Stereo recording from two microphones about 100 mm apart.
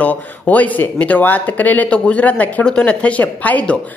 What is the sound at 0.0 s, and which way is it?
Speech, 15° left (ahead or behind).